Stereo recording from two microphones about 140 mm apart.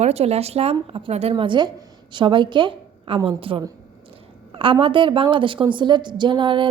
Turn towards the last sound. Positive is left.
turn(degrees=-35)  # may be behind; listen again after turning